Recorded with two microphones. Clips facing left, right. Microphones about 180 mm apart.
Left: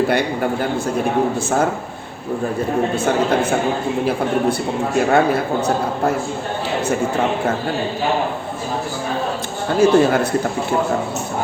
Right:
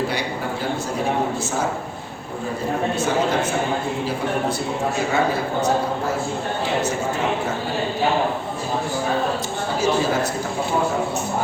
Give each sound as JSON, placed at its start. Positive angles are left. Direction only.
{"t": 4.9, "sound": "speech", "side_deg": 60}
{"t": 9.8, "sound": "speech", "side_deg": 60}